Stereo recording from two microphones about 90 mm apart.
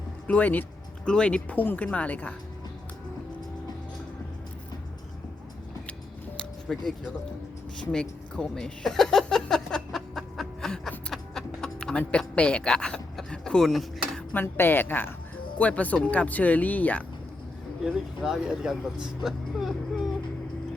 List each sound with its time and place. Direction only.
0.3 s speech: 20° left (ahead or behind)
6.3 s music: 5° left (ahead or behind)
8.4 s a sound: 5° left (ahead or behind)
14.3 s a woman's voice: 25° left (ahead or behind)
17.8 s speech: 5° right (ahead or behind)
19.2 s vehicle: 5° right (ahead or behind)